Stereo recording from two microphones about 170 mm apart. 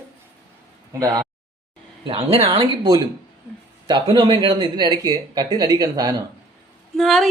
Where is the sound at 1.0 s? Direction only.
20° right (ahead or behind).